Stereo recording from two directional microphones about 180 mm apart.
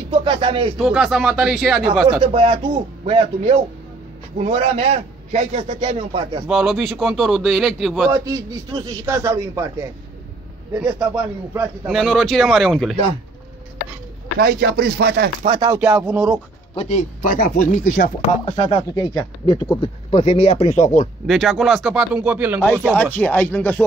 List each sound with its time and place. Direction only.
0.1 s speech: 30° right (ahead or behind)
0.7 s a man's voice: 5° right (ahead or behind)
2.2 s a man's voice: 30° right (ahead or behind)
5.8 s a man's voice: 30° right (ahead or behind)
6.4 s a man's voice: 5° right (ahead or behind)
8.8 s a man's voice: 15° right (ahead or behind)
11.9 s a man's voice: centre (ahead or behind)
14.4 s chopping: 60° right (ahead or behind)
15.4 s speech: 25° right (ahead or behind)
15.7 s a man's voice: 5° right (ahead or behind)
16.7 s speech: 40° left (ahead or behind)
18.2 s speech: 30° left (ahead or behind)
21.3 s a man's voice: centre (ahead or behind)
23.1 s speech: 10° left (ahead or behind)